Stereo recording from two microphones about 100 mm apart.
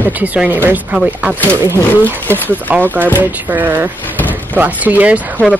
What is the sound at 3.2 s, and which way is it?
Speech, 15° right (ahead or behind).